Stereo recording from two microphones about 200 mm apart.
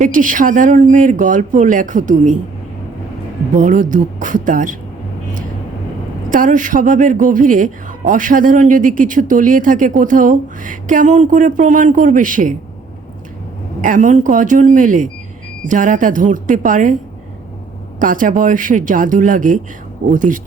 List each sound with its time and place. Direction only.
0.0 s speech: 40° right (ahead or behind)
3.5 s speech: 40° right (ahead or behind)
6.3 s speech: 40° right (ahead or behind)
13.8 s speech: 40° right (ahead or behind)
18.0 s speech: 45° right (ahead or behind)